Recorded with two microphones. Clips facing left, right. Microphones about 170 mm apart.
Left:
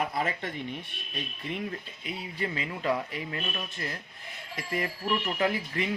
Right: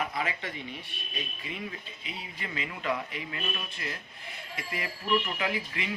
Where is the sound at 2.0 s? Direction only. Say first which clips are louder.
Left 7 dB; 40° left (ahead or behind).